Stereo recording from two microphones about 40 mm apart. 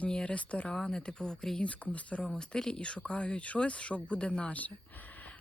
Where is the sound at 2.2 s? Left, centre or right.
Centre.